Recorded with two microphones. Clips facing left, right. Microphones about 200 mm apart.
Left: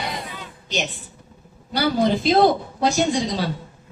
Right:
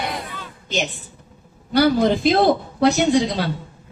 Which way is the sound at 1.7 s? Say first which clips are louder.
Right 4 dB; 55° right (ahead or behind).